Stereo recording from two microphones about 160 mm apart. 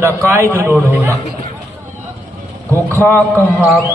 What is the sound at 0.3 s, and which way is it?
Speech, 15° right (ahead or behind).